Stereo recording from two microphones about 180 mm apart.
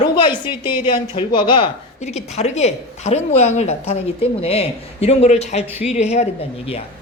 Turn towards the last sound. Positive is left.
turn(degrees=35)  # may be behind; listen again after turning